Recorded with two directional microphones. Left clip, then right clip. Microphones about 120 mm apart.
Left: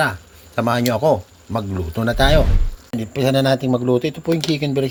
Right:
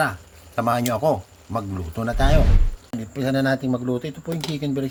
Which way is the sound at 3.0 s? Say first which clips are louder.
Left 6 dB; 45° left (ahead or behind).